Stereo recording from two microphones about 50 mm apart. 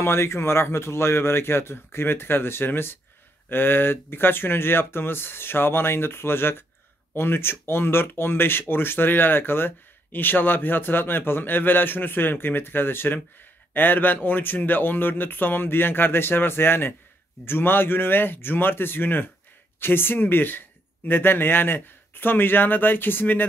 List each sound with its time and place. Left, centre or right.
0.0 s speech: left